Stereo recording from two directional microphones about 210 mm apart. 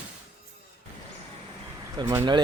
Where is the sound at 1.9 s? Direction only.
15° right (ahead or behind).